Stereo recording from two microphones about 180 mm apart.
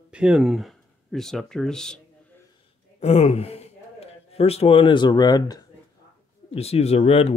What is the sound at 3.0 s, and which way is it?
Speech, 35° left (ahead or behind).